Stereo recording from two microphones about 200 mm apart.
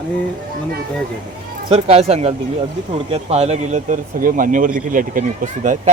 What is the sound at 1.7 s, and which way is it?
Speech, 30° right (ahead or behind).